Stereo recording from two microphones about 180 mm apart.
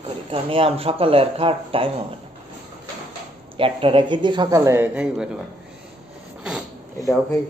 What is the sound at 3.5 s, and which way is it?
Speech, 30° right (ahead or behind).